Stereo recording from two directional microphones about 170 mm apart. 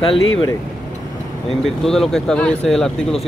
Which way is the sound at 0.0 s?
30° left (ahead or behind).